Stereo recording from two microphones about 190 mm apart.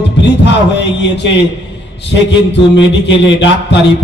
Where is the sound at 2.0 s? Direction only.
65° left (ahead or behind).